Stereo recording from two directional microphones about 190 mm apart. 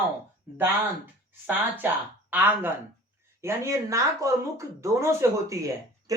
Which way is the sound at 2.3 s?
10° right (ahead or behind).